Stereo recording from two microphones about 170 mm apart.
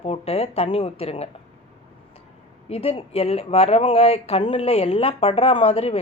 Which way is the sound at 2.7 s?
35° left (ahead or behind).